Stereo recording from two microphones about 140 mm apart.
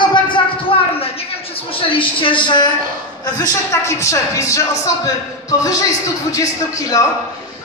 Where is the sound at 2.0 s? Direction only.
35° left (ahead or behind).